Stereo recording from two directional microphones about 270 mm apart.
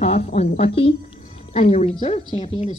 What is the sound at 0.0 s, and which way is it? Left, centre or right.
A woman's voice, left.